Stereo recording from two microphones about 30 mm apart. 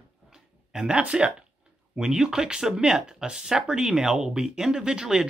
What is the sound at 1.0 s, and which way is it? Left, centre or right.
Speech, right.